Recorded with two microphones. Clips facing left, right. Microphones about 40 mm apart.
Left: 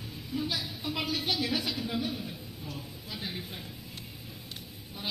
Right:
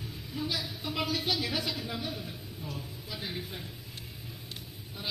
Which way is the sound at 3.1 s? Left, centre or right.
Centre.